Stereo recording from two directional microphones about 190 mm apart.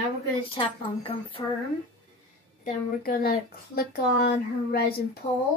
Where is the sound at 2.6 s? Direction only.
50° left (ahead or behind).